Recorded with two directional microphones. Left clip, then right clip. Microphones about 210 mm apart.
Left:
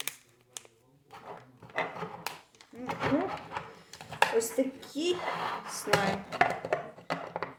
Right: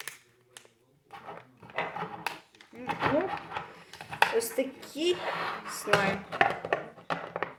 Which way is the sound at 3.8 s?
Centre (ahead or behind).